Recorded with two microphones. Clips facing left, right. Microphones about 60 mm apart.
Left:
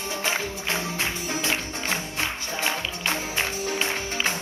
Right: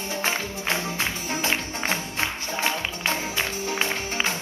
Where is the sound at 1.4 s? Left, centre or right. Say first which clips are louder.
Right 3 dB; right.